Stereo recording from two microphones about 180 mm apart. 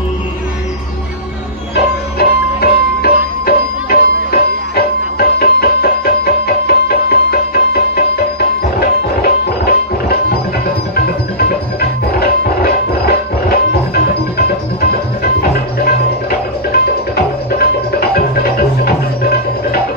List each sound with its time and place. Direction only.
2.1 s music: 60° left (ahead or behind)
15.4 s music: 60° left (ahead or behind)